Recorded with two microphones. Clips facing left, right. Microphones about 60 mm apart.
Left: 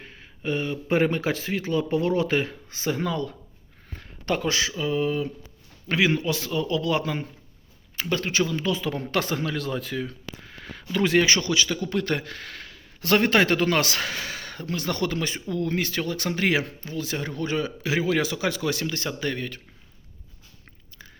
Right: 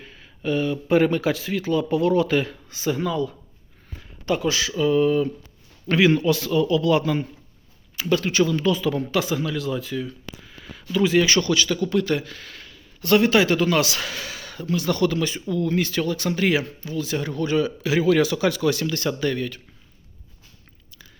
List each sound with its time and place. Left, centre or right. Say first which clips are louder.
0.0 s speech: right 3 dB; left
3.9 s a sound: right 2 dB; left
4.8 s a sound: right 9 dB; centre
6.3 s speech: right 6 dB; left
9.1 s speech: right 2 dB; left
10.3 s a sound: left 1 dB; left
11.3 s speech: right 4 dB; centre
12.0 s speech: right 3 dB; left
17.2 s speech: right 5 dB; left